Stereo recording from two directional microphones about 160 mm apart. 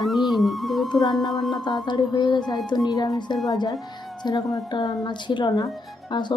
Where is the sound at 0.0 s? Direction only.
Centre (ahead or behind).